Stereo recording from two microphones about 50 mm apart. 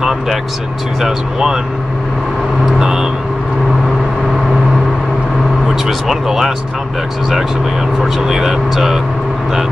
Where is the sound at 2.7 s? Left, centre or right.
Centre.